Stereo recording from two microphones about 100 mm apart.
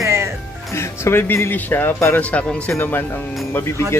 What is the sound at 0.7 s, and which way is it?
Speech, 25° left (ahead or behind).